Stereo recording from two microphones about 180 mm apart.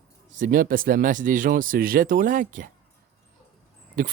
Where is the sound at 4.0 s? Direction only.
45° right (ahead or behind).